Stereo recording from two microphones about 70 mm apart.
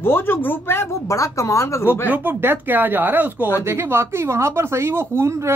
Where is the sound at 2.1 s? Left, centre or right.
Right.